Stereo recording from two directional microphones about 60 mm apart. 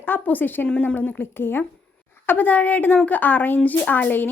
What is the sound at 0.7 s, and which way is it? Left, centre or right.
Speech, centre.